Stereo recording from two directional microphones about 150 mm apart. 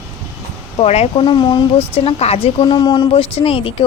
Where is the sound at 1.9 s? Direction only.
40° left (ahead or behind).